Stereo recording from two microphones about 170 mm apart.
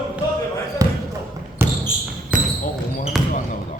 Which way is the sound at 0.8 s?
20° right (ahead or behind).